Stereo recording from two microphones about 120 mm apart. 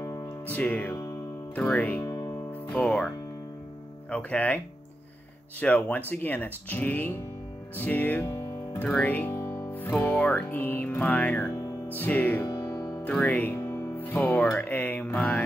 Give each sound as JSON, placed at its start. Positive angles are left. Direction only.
{"t": 0.5, "sound": "speech", "side_deg": 15}
{"t": 2.0, "sound": "music", "side_deg": 30}
{"t": 2.8, "sound": "speech", "side_deg": 5}
{"t": 4.1, "sound": "speech", "side_deg": 10}
{"t": 5.6, "sound": "speech", "side_deg": 15}
{"t": 8.3, "sound": "music", "side_deg": 25}
{"t": 8.8, "sound": "speech", "side_deg": 15}
{"t": 9.3, "sound": "music", "side_deg": 25}
{"t": 10.0, "sound": "speech", "side_deg": 15}
{"t": 12.4, "sound": "music", "side_deg": 35}
{"t": 13.0, "sound": "speech", "side_deg": 10}